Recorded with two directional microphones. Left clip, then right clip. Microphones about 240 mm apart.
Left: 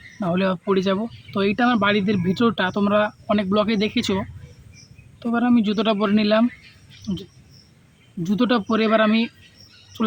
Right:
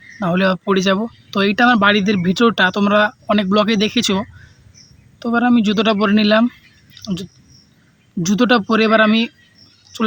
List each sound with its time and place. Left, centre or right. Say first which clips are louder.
0.2 s speech: right 6 dB; right